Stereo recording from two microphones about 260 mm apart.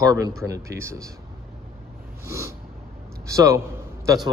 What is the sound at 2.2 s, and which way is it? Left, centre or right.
Snort, centre.